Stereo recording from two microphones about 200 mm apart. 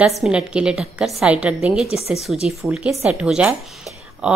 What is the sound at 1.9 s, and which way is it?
Speech, 30° left (ahead or behind).